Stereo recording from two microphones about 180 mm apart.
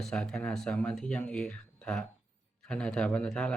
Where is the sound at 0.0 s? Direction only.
5° left (ahead or behind).